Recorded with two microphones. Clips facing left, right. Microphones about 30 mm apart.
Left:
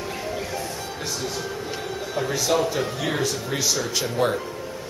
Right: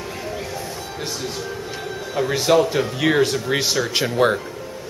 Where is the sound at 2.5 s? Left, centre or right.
Right.